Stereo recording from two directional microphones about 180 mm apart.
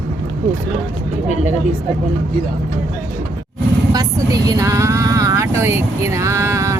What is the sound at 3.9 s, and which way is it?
Speech, 20° right (ahead or behind).